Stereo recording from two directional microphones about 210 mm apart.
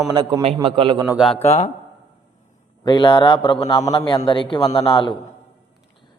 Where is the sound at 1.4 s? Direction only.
30° left (ahead or behind).